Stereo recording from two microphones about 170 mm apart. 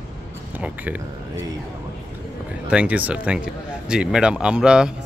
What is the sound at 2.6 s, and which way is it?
Speech, 10° right (ahead or behind).